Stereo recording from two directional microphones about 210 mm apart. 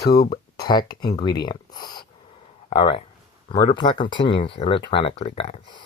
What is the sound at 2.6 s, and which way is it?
Speech, 25° left (ahead or behind).